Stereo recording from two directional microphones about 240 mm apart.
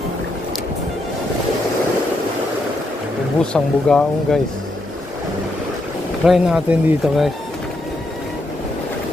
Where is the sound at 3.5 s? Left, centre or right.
Centre.